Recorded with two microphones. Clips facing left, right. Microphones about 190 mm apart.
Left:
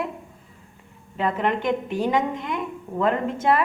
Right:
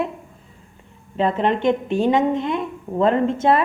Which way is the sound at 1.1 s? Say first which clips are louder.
Right 4 dB; 25° right (ahead or behind).